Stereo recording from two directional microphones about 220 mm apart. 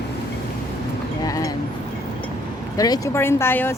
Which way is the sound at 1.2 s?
15° left (ahead or behind).